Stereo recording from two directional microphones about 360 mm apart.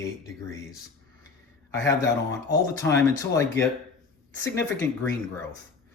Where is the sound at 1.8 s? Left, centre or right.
Centre.